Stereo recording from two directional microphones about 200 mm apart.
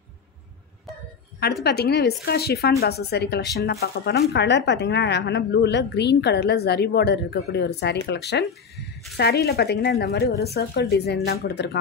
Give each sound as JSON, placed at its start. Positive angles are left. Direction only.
{"t": 1.6, "sound": "speech", "side_deg": 55}
{"t": 8.5, "sound": "a sound", "side_deg": 0}
{"t": 9.1, "sound": "speech", "side_deg": 55}